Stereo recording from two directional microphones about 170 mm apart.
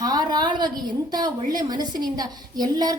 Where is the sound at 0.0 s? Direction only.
25° right (ahead or behind).